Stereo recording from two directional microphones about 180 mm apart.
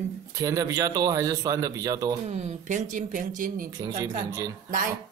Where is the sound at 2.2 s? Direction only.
40° right (ahead or behind).